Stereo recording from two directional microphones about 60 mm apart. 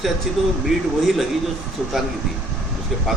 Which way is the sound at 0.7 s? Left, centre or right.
Centre.